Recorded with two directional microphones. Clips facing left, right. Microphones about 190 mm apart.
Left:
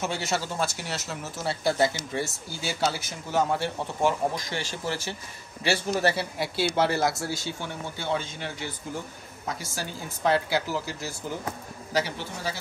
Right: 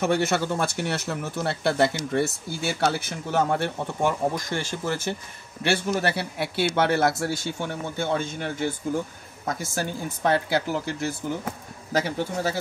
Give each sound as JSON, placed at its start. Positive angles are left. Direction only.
{"t": 0.0, "sound": "speech", "side_deg": -55}